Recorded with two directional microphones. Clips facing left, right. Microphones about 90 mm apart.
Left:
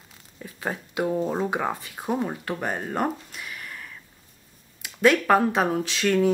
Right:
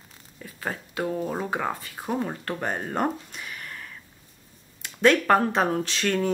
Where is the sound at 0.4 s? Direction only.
15° left (ahead or behind).